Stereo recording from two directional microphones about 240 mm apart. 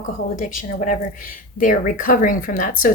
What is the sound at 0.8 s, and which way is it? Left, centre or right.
Speech, left.